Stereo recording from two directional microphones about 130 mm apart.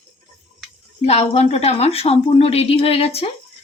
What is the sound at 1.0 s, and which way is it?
A woman's voice, 55° left (ahead or behind).